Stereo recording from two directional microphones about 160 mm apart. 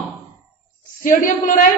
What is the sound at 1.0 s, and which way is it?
Speech, 55° left (ahead or behind).